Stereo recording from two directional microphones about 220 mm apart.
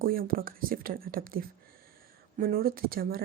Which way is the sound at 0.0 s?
40° right (ahead or behind).